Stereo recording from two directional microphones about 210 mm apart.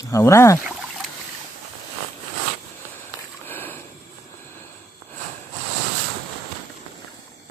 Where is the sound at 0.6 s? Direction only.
Centre (ahead or behind).